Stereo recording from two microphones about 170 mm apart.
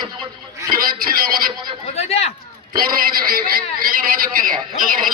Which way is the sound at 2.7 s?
60° right (ahead or behind).